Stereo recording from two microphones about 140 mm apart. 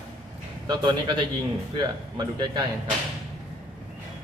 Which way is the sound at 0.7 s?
35° right (ahead or behind).